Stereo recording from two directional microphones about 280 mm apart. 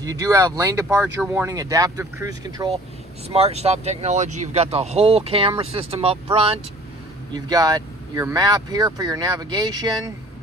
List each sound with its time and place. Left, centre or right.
0.0 s speech: centre